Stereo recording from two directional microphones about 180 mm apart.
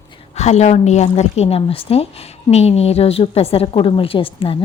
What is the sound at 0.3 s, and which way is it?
A woman's voice, 40° left (ahead or behind).